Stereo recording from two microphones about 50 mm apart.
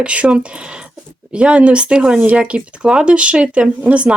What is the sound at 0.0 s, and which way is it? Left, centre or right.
Speech, right.